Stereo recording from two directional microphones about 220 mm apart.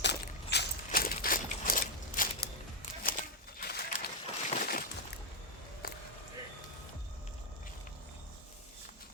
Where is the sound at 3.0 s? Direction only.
40° left (ahead or behind).